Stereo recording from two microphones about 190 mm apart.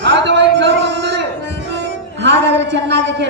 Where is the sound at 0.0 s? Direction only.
65° right (ahead or behind).